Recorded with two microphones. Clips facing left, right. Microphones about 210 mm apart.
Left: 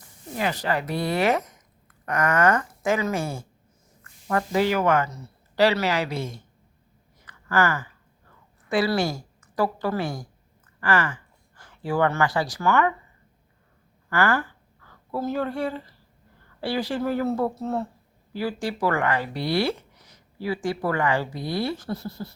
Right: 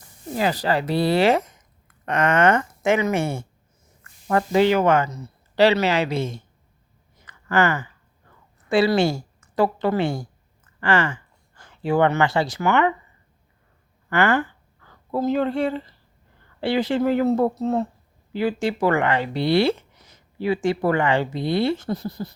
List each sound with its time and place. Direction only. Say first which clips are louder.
0.3 s speech: right 4 dB; 35° right (ahead or behind)
7.3 s a sound: right 3 dB; 20° right (ahead or behind)
8.7 s speech: right 5 dB; 25° right (ahead or behind)
14.1 s a woman's voice: right 3 dB; 20° right (ahead or behind)